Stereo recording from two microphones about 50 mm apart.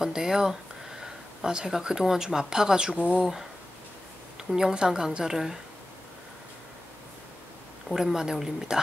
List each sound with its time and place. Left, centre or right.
0.0 s speech: centre
7.9 s speech: centre